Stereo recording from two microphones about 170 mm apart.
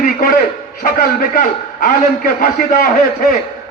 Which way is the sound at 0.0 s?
55° left (ahead or behind).